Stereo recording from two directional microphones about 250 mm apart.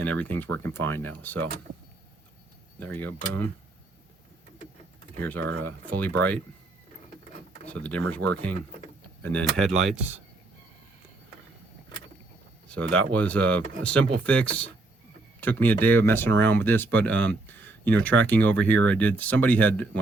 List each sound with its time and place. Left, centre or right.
0.0 s speech: centre
2.8 s speech: centre
5.2 s speech: centre
7.7 s speech: centre
12.6 s speech: centre